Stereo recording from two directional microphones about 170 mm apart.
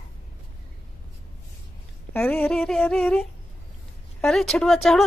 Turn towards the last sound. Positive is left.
turn(degrees=0)  # may be behind; listen again after turning